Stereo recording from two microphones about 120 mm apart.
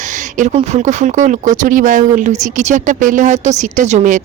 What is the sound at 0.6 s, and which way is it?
Speech, 75° right (ahead or behind).